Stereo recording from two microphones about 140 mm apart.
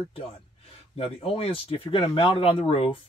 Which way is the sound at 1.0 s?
40° left (ahead or behind).